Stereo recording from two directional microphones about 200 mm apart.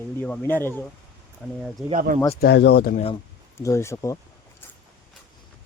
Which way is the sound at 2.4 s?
55° left (ahead or behind).